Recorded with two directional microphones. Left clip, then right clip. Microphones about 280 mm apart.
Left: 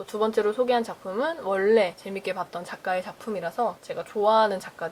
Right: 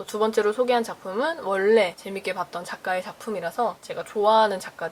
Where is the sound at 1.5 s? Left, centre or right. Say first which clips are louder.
Right 1 dB; centre.